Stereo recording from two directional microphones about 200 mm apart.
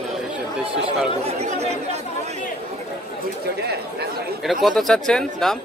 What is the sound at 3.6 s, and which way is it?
Chatter, 55° right (ahead or behind).